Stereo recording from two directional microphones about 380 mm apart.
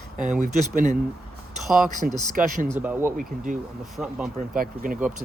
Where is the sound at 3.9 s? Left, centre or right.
Centre.